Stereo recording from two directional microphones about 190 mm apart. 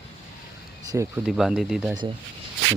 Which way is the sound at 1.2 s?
Centre (ahead or behind).